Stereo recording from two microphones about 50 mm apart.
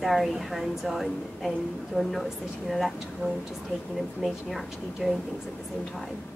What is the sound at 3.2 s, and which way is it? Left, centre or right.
Speech, right.